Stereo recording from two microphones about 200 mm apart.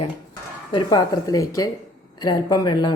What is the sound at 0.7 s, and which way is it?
A woman's voice, 20° left (ahead or behind).